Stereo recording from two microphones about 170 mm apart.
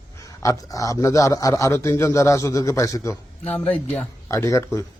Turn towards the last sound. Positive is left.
turn(degrees=15)  # may be behind; listen again after turning